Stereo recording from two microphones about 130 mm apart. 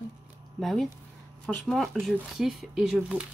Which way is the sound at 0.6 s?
Centre (ahead or behind).